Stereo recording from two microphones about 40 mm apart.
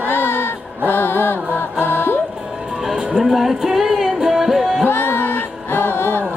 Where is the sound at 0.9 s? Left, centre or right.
Left.